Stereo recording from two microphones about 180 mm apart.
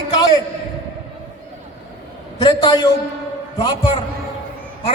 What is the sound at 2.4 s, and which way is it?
A man's voice, 25° left (ahead or behind).